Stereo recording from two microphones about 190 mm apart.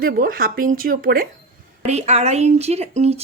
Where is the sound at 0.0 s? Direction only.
50° right (ahead or behind).